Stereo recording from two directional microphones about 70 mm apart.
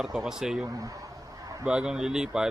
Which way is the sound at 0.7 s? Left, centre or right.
Right.